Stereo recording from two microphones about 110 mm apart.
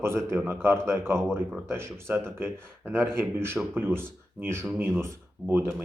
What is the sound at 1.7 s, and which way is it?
Speech, 25° right (ahead or behind).